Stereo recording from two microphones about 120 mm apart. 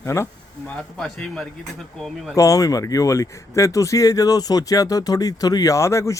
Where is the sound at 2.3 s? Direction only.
25° left (ahead or behind).